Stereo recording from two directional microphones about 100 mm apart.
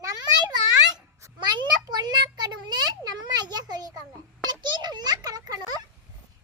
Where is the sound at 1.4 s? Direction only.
45° right (ahead or behind).